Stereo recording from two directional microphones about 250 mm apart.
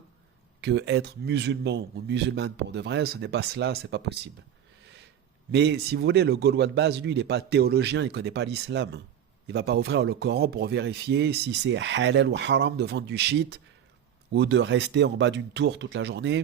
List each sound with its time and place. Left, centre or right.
0.6 s speech: right
5.5 s a man's voice: right